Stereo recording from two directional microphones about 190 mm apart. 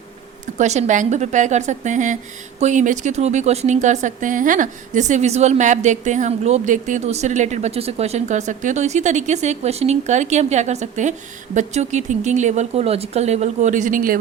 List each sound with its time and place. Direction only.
0.6 s a woman's voice: 35° right (ahead or behind)